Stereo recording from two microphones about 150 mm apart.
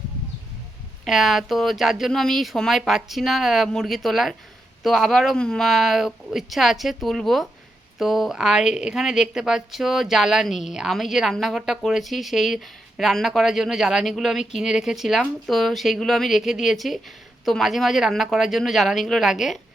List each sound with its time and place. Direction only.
1.0 s a woman's voice: centre (ahead or behind)